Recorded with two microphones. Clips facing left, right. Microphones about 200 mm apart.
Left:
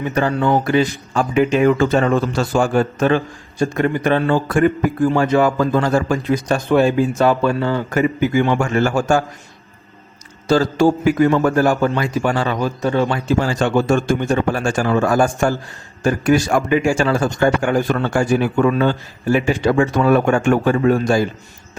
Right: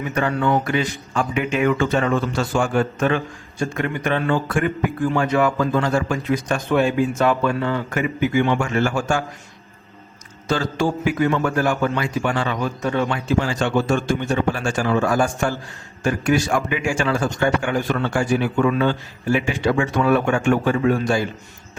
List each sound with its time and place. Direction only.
0.0 s speech: 35° left (ahead or behind)
10.5 s speech: 40° left (ahead or behind)